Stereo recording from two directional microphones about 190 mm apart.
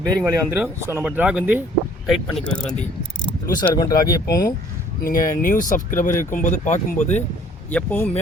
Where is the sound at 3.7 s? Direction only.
20° left (ahead or behind).